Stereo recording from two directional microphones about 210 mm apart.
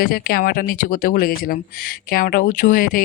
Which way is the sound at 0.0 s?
45° left (ahead or behind).